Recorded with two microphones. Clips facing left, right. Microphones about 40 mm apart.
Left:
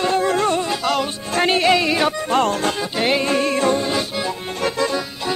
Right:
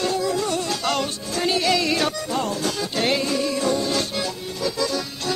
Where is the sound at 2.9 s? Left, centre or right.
Centre.